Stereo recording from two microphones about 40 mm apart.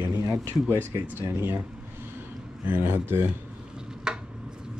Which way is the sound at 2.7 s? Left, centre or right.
Right.